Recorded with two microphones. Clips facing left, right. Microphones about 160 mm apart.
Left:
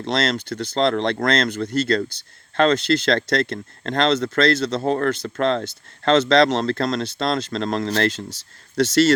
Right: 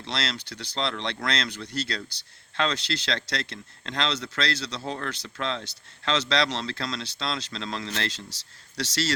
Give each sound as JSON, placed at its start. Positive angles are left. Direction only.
{"t": 0.0, "sound": "speech", "side_deg": 50}